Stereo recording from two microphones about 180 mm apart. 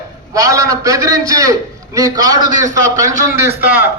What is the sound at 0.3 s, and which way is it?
A man's voice, 20° right (ahead or behind).